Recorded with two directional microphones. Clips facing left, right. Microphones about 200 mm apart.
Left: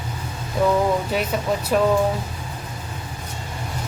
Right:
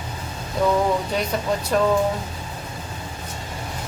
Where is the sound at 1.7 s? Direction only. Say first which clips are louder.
Left 1 dB; 10° left (ahead or behind).